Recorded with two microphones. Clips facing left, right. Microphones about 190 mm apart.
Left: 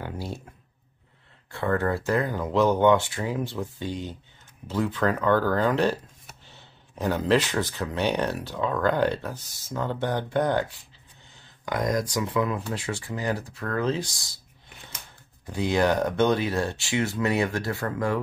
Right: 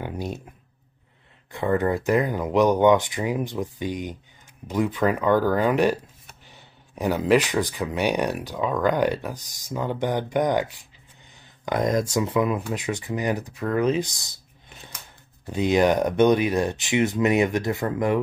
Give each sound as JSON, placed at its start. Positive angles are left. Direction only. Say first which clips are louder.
{"t": 0.0, "sound": "a sound", "louder": "right 3 dB", "side_deg": -20}
{"t": 1.5, "sound": "speech", "louder": "right 3 dB", "side_deg": -15}
{"t": 15.5, "sound": "speech", "louder": "right 3 dB", "side_deg": -20}